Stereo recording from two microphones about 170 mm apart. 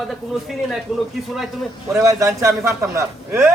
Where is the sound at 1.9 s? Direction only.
15° right (ahead or behind).